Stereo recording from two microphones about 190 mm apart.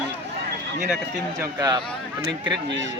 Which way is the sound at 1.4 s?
20° right (ahead or behind).